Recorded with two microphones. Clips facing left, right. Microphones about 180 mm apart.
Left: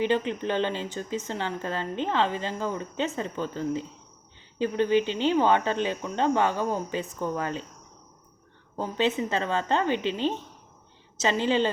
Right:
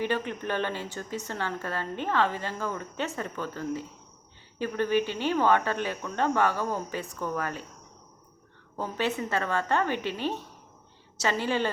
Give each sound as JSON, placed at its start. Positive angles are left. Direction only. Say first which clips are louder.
{"t": 0.0, "sound": "speech", "louder": "left 4 dB", "side_deg": 20}
{"t": 8.7, "sound": "speech", "louder": "left 3 dB", "side_deg": 20}